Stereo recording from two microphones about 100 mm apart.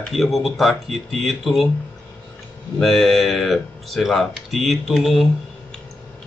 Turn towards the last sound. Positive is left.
turn(degrees=0)  # may be behind; listen again after turning